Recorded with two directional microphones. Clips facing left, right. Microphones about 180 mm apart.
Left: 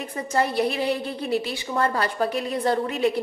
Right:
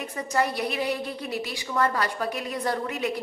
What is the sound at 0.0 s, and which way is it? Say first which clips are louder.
A woman's voice: left 2 dB; 30° left (ahead or behind).